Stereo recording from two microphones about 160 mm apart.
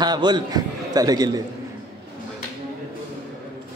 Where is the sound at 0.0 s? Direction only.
25° right (ahead or behind).